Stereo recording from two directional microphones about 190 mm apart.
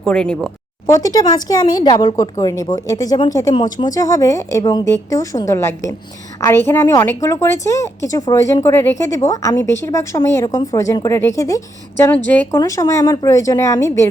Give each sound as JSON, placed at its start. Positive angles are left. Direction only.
{"t": 0.0, "sound": "speech", "side_deg": 5}
{"t": 0.9, "sound": "a woman's voice", "side_deg": 20}